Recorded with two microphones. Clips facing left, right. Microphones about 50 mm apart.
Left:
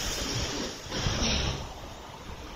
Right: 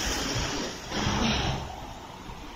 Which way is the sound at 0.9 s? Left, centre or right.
Right.